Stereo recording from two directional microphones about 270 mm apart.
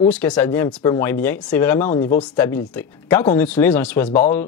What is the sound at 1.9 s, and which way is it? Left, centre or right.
Speech, left.